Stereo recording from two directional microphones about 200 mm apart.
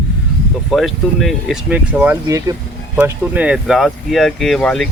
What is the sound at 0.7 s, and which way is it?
Speech, centre (ahead or behind).